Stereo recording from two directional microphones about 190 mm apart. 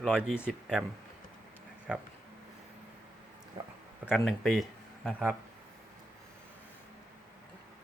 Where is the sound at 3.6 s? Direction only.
25° right (ahead or behind).